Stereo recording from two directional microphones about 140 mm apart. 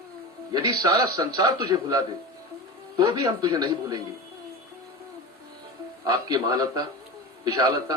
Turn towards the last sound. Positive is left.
turn(degrees=-25)  # may be behind; listen again after turning